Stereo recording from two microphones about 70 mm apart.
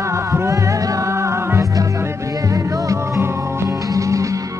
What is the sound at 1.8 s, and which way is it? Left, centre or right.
Music, right.